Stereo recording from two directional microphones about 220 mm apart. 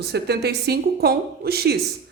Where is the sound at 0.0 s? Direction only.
50° right (ahead or behind).